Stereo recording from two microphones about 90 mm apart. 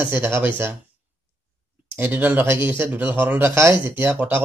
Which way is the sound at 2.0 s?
20° right (ahead or behind).